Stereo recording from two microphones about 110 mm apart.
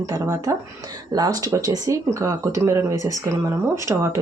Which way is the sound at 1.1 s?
35° right (ahead or behind).